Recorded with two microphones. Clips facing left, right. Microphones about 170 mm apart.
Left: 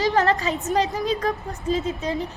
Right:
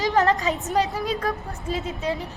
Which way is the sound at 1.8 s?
Centre (ahead or behind).